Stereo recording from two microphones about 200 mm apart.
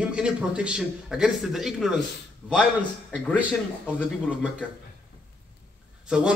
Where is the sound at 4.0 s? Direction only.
5° left (ahead or behind).